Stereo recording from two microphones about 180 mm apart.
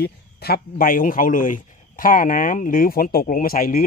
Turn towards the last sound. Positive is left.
turn(degrees=50)  # may be behind; listen again after turning